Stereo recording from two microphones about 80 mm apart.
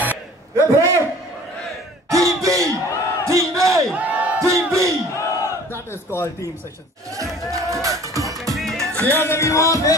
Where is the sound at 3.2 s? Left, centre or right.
Right.